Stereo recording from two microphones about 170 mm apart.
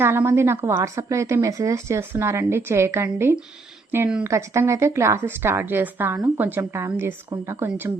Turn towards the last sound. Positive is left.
turn(degrees=-15)  # may be behind; listen again after turning